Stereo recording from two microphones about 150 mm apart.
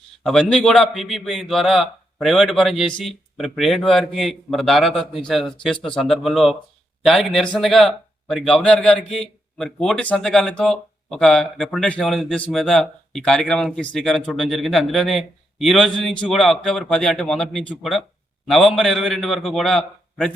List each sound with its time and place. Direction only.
0.3 s speech: centre (ahead or behind)